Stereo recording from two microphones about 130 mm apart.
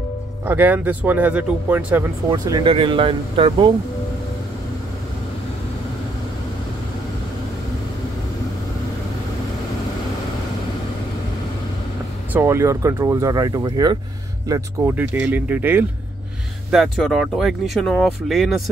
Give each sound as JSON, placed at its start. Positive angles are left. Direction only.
{"t": 0.5, "sound": "speech", "side_deg": -15}
{"t": 2.3, "sound": "speech", "side_deg": -25}
{"t": 2.6, "sound": "speech", "side_deg": -40}
{"t": 12.3, "sound": "speech", "side_deg": -20}
{"t": 15.0, "sound": "speech", "side_deg": -15}
{"t": 16.7, "sound": "speech", "side_deg": 0}